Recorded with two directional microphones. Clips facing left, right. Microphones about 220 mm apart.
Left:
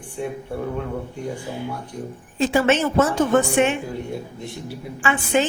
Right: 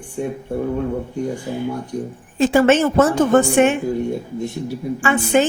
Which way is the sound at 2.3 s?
50° right (ahead or behind).